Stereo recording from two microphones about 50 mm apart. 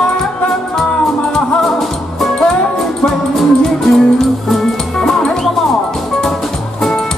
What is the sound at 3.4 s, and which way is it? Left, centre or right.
Music, centre.